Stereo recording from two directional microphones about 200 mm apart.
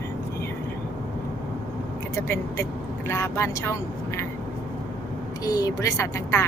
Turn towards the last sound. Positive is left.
turn(degrees=15)  # may be behind; listen again after turning